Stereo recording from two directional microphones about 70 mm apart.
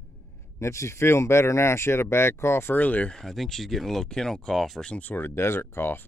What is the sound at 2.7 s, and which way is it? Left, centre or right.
Speech, left.